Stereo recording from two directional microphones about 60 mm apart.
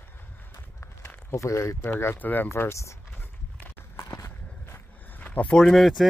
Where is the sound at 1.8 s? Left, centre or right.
Left.